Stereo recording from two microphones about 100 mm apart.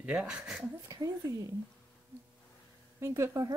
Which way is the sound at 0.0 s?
15° right (ahead or behind).